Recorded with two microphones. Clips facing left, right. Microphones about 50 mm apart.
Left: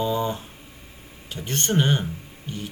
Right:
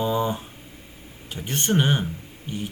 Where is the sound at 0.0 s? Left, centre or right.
Centre.